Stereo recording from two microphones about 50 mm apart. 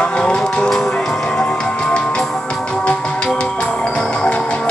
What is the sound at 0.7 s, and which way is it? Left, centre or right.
Music, centre.